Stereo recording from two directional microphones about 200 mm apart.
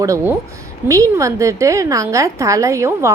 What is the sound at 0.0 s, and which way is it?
A woman's voice, 15° right (ahead or behind).